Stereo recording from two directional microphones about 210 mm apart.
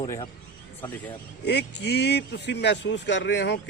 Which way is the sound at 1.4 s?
55° left (ahead or behind).